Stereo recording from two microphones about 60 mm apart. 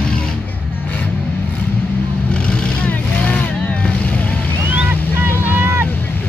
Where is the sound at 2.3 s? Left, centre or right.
Centre.